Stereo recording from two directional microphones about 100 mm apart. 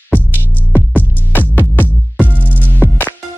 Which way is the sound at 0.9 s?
20° left (ahead or behind).